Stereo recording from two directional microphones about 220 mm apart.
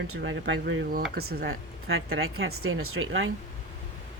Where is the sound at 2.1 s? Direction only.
70° right (ahead or behind).